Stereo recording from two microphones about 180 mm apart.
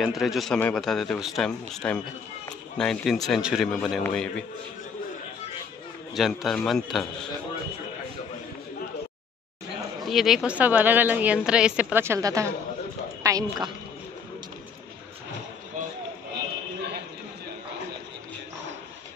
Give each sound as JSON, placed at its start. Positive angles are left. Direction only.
{"t": 0.0, "sound": "a man's voice", "side_deg": 0}
{"t": 6.1, "sound": "a man's voice", "side_deg": 0}
{"t": 10.0, "sound": "a woman's voice", "side_deg": 0}